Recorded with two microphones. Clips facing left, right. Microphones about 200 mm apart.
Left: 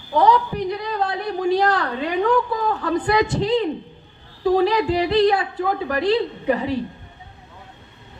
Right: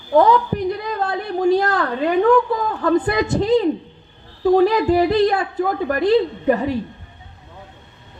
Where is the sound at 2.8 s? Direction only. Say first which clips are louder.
Right 3 dB; 45° right (ahead or behind).